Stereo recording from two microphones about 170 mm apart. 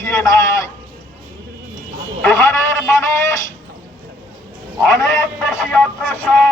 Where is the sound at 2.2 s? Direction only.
15° left (ahead or behind).